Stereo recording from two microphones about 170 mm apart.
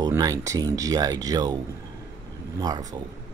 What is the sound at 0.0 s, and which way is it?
Speech, 20° right (ahead or behind).